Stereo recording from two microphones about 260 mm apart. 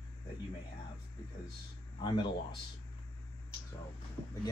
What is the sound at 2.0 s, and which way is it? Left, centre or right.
Speech, centre.